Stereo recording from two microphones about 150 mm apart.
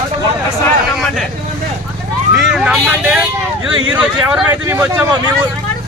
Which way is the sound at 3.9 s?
10° right (ahead or behind).